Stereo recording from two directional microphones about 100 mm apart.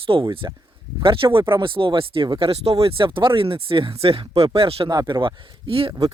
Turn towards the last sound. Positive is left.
turn(degrees=-60)  # may be behind; listen again after turning